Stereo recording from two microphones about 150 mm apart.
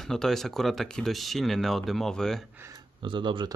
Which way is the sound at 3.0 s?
35° right (ahead or behind).